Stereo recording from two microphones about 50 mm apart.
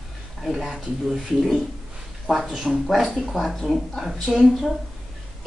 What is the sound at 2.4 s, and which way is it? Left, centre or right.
Speech, centre.